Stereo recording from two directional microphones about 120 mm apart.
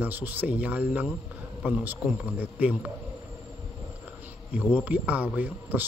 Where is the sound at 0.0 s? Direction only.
15° right (ahead or behind).